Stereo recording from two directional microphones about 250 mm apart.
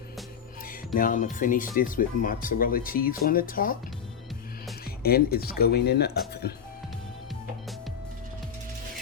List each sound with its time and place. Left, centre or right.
0.9 s speech: left
5.0 s speech: left